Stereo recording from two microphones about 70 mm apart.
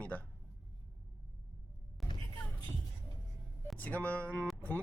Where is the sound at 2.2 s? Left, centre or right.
Left.